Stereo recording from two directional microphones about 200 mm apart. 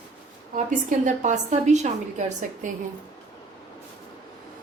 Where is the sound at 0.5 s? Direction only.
40° right (ahead or behind).